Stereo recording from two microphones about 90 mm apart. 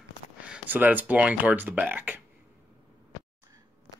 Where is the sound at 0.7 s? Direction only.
20° right (ahead or behind).